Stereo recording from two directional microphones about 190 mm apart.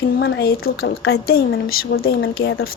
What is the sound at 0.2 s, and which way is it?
A woman's voice, 60° left (ahead or behind).